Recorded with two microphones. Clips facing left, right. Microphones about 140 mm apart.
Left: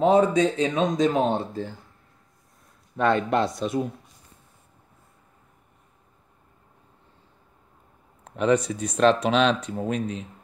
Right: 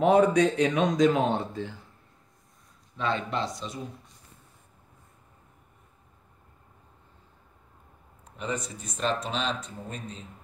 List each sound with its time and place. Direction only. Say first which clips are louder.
0.0 s speech: left 2 dB; 30° left (ahead or behind)
3.0 s speech: left 8 dB; 55° left (ahead or behind)
8.2 s speech: left 12 dB; 75° left (ahead or behind)